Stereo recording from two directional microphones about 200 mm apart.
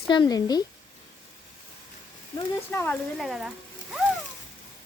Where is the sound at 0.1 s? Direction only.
20° left (ahead or behind).